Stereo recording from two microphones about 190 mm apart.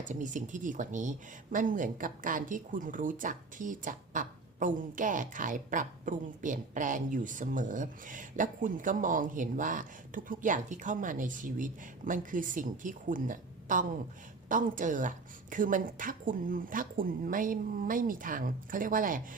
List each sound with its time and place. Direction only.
0.0 s a woman's voice: 40° right (ahead or behind)